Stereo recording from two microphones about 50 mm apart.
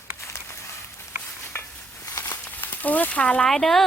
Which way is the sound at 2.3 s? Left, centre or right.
Left.